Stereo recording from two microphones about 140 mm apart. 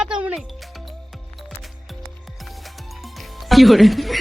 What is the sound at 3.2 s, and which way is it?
Music, centre (ahead or behind).